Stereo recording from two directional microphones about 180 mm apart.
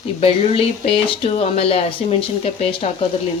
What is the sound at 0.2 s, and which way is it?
Speech, 30° left (ahead or behind).